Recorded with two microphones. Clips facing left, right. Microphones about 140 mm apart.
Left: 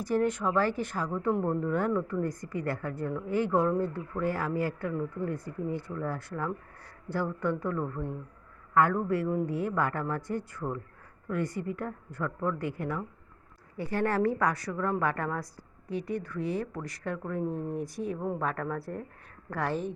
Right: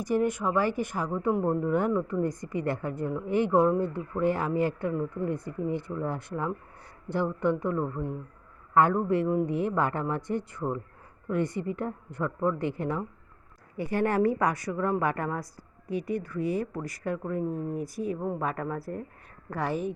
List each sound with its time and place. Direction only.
0.0 s speech: 15° right (ahead or behind)
13.7 s a woman's voice: 15° right (ahead or behind)